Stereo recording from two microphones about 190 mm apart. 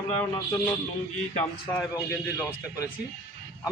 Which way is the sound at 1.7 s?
10° left (ahead or behind).